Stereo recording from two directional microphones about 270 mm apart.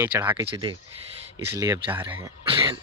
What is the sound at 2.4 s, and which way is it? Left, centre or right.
Cough, centre.